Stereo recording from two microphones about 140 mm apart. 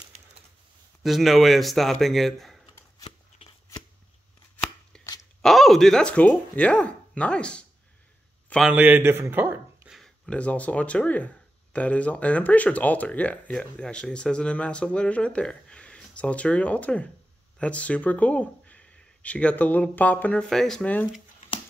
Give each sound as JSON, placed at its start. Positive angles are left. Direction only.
{"t": 1.0, "sound": "speech", "side_deg": 0}
{"t": 3.0, "sound": "shuffling cards", "side_deg": 50}
{"t": 4.9, "sound": "a sound", "side_deg": 5}
{"t": 5.4, "sound": "speech", "side_deg": 0}
{"t": 8.6, "sound": "a man's voice", "side_deg": -10}
{"t": 9.9, "sound": "speech", "side_deg": 5}